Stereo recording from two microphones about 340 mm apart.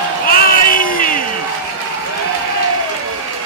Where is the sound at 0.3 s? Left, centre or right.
Left.